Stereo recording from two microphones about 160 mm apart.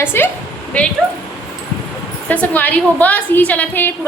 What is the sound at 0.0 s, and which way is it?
Speech, 15° left (ahead or behind).